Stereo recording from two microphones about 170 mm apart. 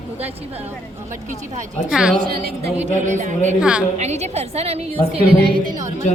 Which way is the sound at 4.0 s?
40° right (ahead or behind).